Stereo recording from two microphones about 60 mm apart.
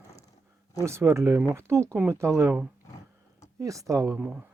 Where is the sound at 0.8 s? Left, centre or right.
Right.